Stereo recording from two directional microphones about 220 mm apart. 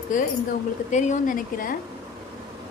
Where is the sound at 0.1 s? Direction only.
35° left (ahead or behind).